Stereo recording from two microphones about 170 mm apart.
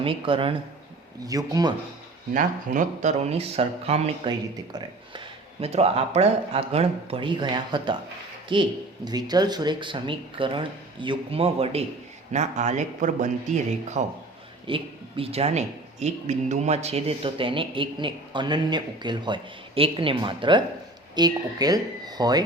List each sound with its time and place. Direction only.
0.0 s speech: 30° right (ahead or behind)
1.2 s speech: 20° right (ahead or behind)
2.3 s speech: 50° right (ahead or behind)
4.3 s speech: 25° right (ahead or behind)